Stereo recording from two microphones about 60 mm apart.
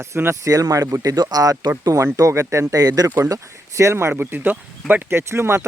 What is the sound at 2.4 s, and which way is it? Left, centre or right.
Speech, right.